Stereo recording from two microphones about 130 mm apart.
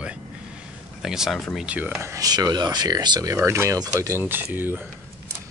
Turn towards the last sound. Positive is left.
turn(degrees=-15)  # may be behind; listen again after turning